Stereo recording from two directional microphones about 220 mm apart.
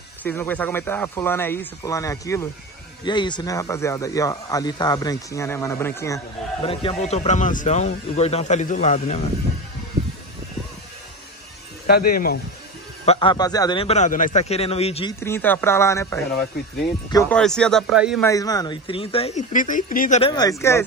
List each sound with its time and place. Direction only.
0.2 s speech: 10° left (ahead or behind)
6.6 s speech: 25° left (ahead or behind)
11.8 s speech: 45° left (ahead or behind)
13.0 s a man's voice: 25° left (ahead or behind)
15.1 s speech: 10° left (ahead or behind)
17.4 s speech: 5° left (ahead or behind)
18.2 s a man's voice: 15° left (ahead or behind); by 20.2 s 40° left (ahead or behind)
20.2 s speech: 20° left (ahead or behind)